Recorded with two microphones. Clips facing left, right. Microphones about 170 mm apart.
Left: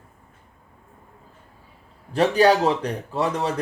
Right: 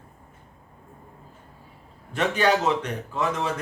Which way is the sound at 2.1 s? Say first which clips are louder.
Left 5 dB; 35° left (ahead or behind).